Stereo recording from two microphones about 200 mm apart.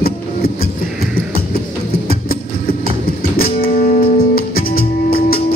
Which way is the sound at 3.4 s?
45° left (ahead or behind).